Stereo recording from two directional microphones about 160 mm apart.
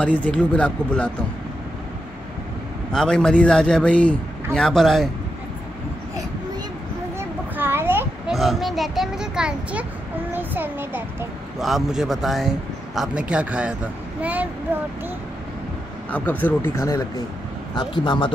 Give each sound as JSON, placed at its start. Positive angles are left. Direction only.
{"t": 0.0, "sound": "speech", "side_deg": 10}
{"t": 2.9, "sound": "a man's voice", "side_deg": 5}
{"t": 7.2, "sound": "a sound", "side_deg": -15}
{"t": 8.3, "sound": "a man's voice", "side_deg": 0}
{"t": 11.6, "sound": "a man's voice", "side_deg": 0}
{"t": 16.1, "sound": "speech", "side_deg": 10}
{"t": 17.7, "sound": "a man's voice", "side_deg": 30}